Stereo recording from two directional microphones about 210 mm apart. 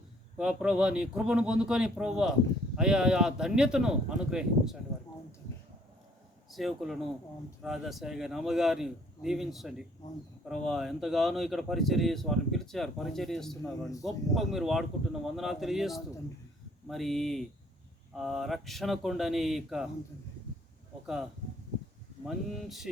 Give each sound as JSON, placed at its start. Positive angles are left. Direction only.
{"t": 0.3, "sound": "speech", "side_deg": -5}
{"t": 6.5, "sound": "speech", "side_deg": 0}
{"t": 22.3, "sound": "speech", "side_deg": 0}